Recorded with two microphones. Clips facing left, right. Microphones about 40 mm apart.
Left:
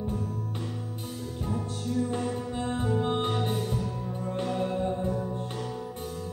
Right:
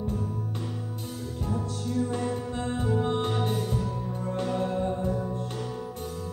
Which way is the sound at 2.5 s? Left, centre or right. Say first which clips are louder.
Even; centre.